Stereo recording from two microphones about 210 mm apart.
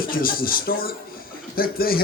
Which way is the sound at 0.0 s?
45° left (ahead or behind).